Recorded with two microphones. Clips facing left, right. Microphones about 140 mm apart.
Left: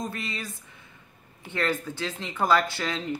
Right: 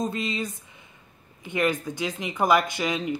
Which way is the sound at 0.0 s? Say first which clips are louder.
Right 6 dB; 20° right (ahead or behind).